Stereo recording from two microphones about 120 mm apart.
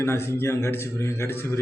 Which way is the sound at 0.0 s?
20° left (ahead or behind).